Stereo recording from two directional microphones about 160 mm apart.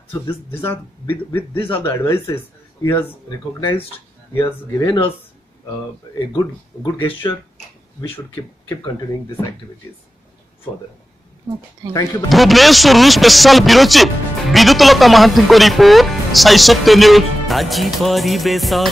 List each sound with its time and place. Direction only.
0.1 s a man's voice: 15° left (ahead or behind)
1.6 s speech: 35° left (ahead or behind)
1.9 s a man's voice: 15° left (ahead or behind)
6.1 s speech: 25° left (ahead or behind)
12.3 s speech: centre (ahead or behind)